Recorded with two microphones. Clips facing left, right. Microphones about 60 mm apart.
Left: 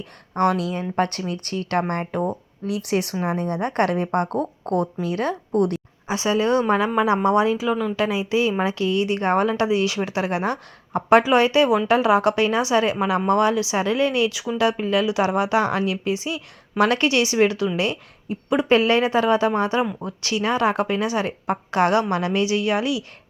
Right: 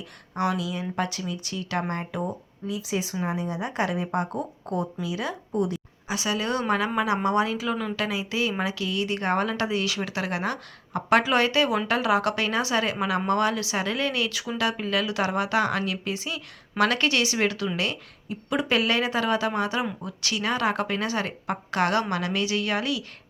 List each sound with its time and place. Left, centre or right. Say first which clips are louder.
0.0 s speech: left 7 dB; left
2.2 s a woman's voice: left 6 dB; left
6.1 s a woman's voice: left 7 dB; left